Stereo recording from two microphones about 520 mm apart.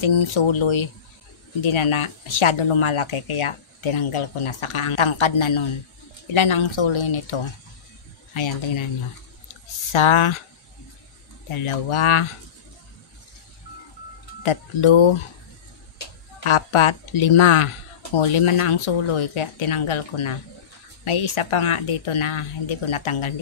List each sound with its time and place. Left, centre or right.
0.0 s speech: left
9.9 s speech: left
11.6 s speech: left
14.4 s speech: left
16.4 s speech: left